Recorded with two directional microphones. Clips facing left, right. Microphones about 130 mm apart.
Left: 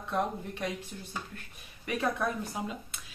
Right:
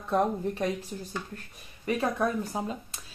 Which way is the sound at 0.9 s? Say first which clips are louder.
Right 6 dB; 25° right (ahead or behind).